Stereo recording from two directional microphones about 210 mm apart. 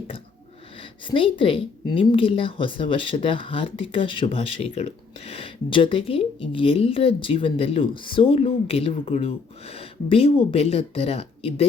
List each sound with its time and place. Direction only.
0.8 s a woman's voice: 25° left (ahead or behind)